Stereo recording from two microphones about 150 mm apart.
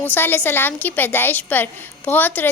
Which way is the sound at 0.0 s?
15° left (ahead or behind).